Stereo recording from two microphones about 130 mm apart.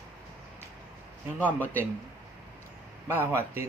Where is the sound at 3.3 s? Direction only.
20° right (ahead or behind).